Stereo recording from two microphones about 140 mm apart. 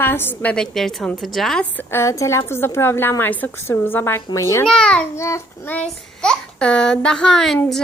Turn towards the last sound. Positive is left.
turn(degrees=5)  # may be behind; listen again after turning